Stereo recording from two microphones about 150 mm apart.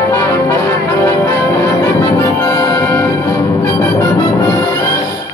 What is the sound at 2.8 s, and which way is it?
Music, 10° left (ahead or behind).